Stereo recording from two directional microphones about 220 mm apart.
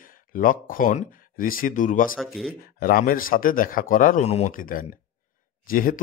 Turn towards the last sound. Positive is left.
turn(degrees=40)  # may be behind; listen again after turning